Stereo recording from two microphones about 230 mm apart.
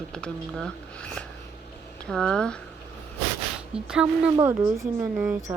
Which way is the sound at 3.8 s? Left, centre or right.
Centre.